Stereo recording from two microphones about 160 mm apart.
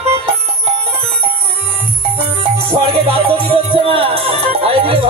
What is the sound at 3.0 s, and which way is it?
Music, 35° right (ahead or behind).